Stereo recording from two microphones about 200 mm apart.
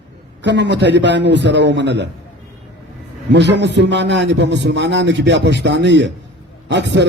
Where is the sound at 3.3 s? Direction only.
60° right (ahead or behind).